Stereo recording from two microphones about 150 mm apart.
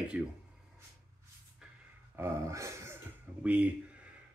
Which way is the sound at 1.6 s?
5° right (ahead or behind).